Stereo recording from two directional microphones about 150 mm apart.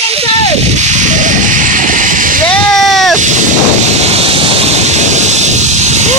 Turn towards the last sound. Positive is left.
turn(degrees=-50)  # may be behind; listen again after turning